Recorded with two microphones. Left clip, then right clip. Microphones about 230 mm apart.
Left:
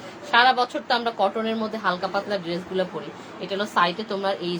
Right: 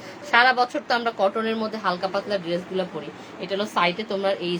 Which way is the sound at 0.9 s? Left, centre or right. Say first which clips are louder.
Even; right.